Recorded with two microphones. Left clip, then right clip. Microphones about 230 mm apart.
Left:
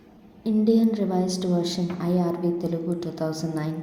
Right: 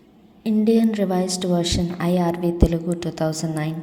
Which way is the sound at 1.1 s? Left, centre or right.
Right.